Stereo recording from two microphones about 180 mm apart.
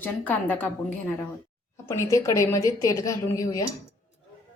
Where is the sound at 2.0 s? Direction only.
15° left (ahead or behind).